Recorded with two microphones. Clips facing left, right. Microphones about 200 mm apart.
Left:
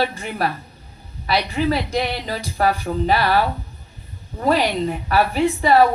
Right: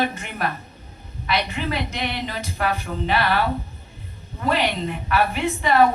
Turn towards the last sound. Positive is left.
turn(degrees=40)  # may be behind; listen again after turning